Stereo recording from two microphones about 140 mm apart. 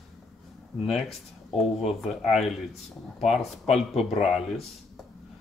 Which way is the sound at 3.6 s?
50° left (ahead or behind).